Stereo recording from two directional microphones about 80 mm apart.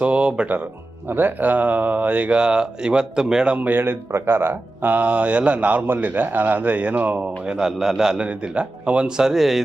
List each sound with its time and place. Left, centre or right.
0.0 s speech: centre